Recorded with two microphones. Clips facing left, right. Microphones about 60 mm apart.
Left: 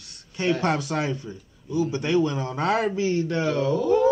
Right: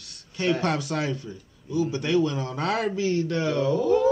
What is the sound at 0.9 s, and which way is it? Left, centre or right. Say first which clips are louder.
A man's voice: left 1 dB; left.